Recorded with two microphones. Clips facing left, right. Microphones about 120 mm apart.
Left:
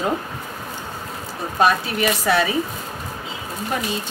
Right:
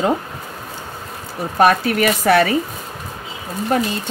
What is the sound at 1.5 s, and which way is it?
Speech, 60° right (ahead or behind).